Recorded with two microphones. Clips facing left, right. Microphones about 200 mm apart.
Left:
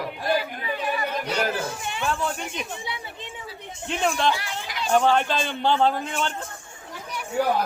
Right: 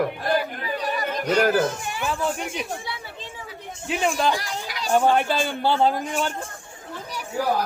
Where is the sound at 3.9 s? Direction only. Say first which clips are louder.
Right 1 dB; 5° right (ahead or behind).